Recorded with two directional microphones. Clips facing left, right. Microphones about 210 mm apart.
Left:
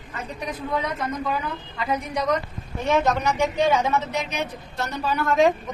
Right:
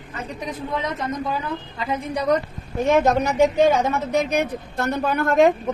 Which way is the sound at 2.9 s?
45° right (ahead or behind).